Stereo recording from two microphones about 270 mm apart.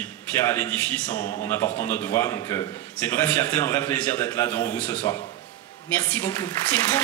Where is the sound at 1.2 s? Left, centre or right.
Left.